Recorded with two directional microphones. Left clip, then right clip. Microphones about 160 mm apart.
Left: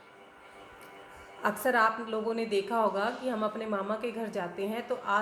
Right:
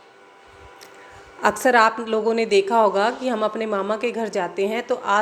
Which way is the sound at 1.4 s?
40° right (ahead or behind).